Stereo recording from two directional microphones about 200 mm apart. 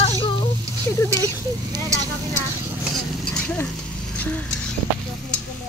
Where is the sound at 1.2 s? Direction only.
15° right (ahead or behind).